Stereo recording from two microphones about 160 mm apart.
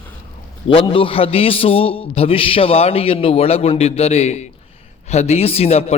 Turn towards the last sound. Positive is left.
turn(degrees=40)  # may be behind; listen again after turning